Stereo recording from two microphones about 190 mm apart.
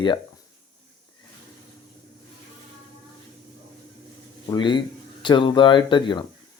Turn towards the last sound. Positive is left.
turn(degrees=25)  # may be behind; listen again after turning